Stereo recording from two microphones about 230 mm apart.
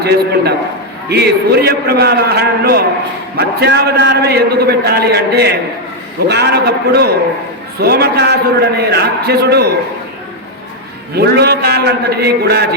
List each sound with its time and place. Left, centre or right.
0.0 s a man's voice: right
11.2 s a man's voice: right